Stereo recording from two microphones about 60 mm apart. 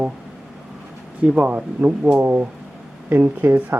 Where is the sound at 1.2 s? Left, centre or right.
Right.